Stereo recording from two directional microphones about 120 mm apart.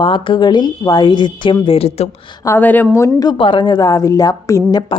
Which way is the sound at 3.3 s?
45° left (ahead or behind).